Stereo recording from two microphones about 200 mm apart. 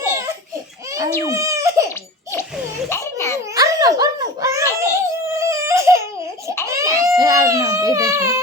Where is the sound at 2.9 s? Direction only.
15° left (ahead or behind).